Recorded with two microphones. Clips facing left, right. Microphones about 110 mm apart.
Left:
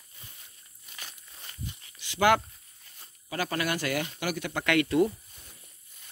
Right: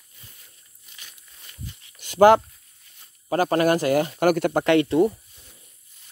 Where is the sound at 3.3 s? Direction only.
40° right (ahead or behind).